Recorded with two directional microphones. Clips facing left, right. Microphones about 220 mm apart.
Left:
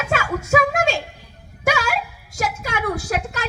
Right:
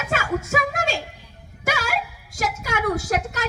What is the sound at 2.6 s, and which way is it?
Speech, 50° right (ahead or behind).